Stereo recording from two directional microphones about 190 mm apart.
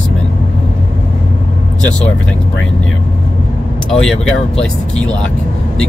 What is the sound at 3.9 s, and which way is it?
Speech, 5° left (ahead or behind).